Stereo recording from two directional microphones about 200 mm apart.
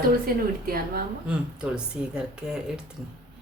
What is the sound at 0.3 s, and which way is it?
Speech, 45° right (ahead or behind).